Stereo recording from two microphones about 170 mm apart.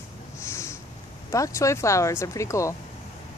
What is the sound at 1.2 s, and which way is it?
Speech, 20° left (ahead or behind).